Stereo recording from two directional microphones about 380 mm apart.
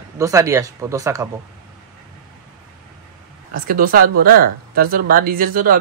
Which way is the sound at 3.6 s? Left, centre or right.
Right.